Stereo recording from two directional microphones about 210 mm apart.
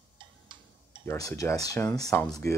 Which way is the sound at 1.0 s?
15° left (ahead or behind).